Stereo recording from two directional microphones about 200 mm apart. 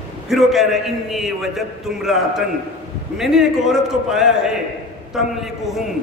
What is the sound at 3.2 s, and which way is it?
A man's voice, centre (ahead or behind).